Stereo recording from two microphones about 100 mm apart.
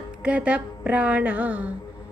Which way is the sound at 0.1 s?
10° right (ahead or behind).